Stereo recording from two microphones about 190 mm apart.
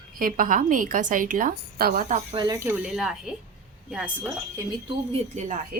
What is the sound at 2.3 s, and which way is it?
A woman's voice, 25° right (ahead or behind).